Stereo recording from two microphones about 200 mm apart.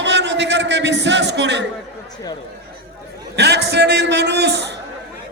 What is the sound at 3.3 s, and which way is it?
A man's voice, 55° right (ahead or behind).